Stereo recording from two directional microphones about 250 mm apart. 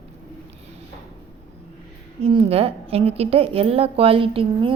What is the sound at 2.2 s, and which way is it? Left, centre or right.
A woman's voice, right.